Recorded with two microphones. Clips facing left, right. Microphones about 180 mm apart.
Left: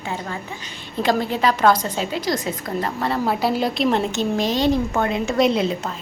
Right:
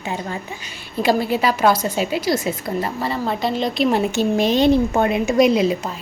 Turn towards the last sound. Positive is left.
turn(degrees=-5)  # may be behind; listen again after turning